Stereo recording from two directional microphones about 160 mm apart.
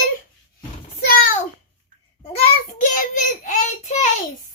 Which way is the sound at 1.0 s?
70° left (ahead or behind).